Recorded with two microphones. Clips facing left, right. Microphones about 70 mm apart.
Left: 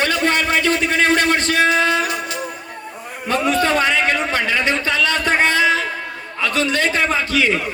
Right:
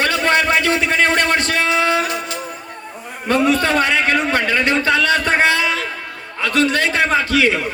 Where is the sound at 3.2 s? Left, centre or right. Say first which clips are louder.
Right 2 dB; right.